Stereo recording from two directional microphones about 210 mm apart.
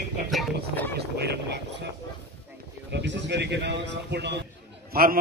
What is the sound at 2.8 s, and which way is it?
A man's voice, 55° right (ahead or behind).